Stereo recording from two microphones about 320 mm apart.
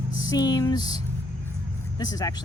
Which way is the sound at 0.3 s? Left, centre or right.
Centre.